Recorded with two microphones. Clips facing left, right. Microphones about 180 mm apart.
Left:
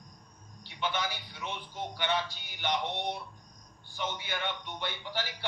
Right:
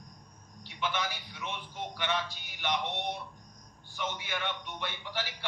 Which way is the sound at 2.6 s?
30° left (ahead or behind).